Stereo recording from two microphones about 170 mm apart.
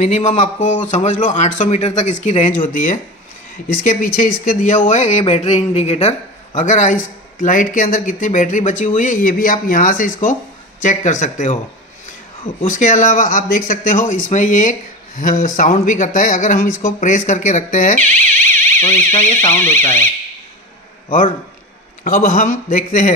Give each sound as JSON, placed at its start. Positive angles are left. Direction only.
{"t": 0.0, "sound": "speech", "side_deg": 45}
{"t": 12.6, "sound": "speech", "side_deg": 50}
{"t": 18.5, "sound": "music", "side_deg": 15}
{"t": 19.4, "sound": "speech", "side_deg": 15}
{"t": 22.0, "sound": "speech", "side_deg": 50}